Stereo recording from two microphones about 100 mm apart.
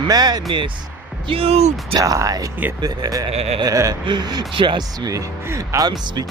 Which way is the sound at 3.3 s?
90° right.